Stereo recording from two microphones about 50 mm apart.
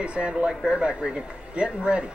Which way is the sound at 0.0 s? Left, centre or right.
Right.